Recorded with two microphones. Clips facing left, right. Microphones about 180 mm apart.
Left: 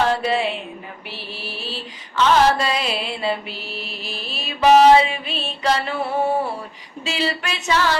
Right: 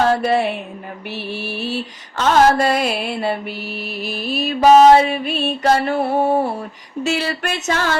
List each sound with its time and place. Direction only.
0.0 s music: 55° right (ahead or behind)
1.5 s music: 50° right (ahead or behind)
3.6 s music: 5° right (ahead or behind)
4.3 s music: 45° right (ahead or behind)